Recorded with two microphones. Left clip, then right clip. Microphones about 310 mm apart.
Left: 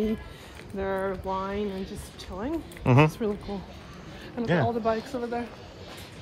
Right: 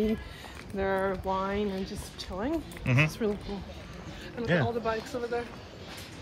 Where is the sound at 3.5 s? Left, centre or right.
Left.